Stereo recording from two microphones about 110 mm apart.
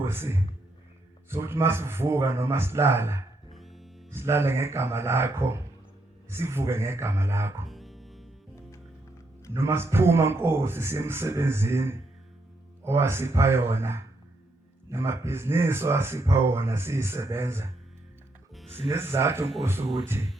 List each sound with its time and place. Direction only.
0.0 s a man's voice: 20° right (ahead or behind)
3.5 s music: centre (ahead or behind)
4.1 s speech: 20° right (ahead or behind)
7.7 s music: centre (ahead or behind)
9.5 s speech: 25° right (ahead or behind)
18.9 s speech: 20° right (ahead or behind)